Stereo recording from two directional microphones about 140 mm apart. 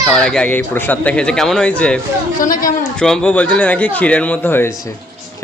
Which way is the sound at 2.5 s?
80° left.